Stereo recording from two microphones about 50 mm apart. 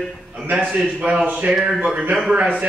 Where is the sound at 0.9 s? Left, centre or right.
Right.